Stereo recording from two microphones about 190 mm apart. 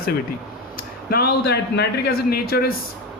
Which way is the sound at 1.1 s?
55° left (ahead or behind).